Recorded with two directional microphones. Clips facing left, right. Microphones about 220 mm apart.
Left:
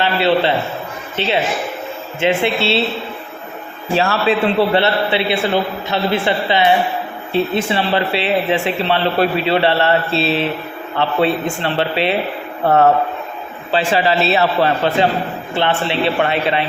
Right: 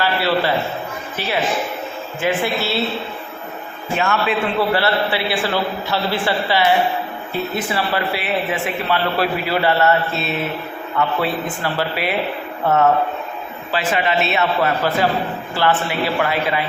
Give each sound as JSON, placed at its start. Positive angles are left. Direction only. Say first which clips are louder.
{"t": 0.0, "sound": "a man's voice", "louder": "left 4 dB", "side_deg": 25}
{"t": 3.9, "sound": "a man's voice", "louder": "left 4 dB", "side_deg": 30}
{"t": 13.9, "sound": "a man's voice", "louder": "left 4 dB", "side_deg": 35}